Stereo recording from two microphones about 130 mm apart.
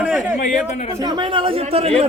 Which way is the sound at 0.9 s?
30° right (ahead or behind).